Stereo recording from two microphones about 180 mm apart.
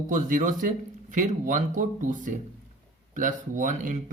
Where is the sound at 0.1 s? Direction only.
45° right (ahead or behind).